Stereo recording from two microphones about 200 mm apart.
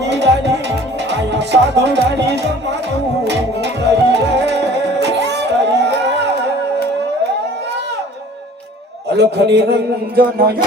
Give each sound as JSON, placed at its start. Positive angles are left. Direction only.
{"t": 0.0, "sound": "music", "side_deg": -60}
{"t": 9.0, "sound": "a man's voice", "side_deg": -55}